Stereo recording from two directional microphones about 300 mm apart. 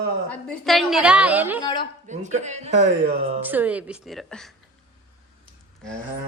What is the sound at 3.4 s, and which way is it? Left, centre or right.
A woman's voice, centre.